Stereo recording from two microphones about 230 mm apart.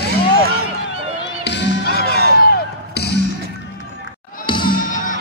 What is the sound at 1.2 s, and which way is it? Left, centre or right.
Music, left.